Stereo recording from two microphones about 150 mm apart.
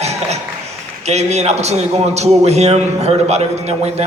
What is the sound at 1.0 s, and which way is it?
A man's voice, 45° right (ahead or behind).